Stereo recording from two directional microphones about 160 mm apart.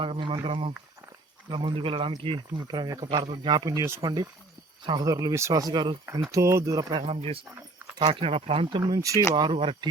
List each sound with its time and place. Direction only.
0.0 s speech: 30° right (ahead or behind)
7.0 s speech: 40° right (ahead or behind)
8.8 s speech: 20° right (ahead or behind)
9.3 s speech: 35° right (ahead or behind)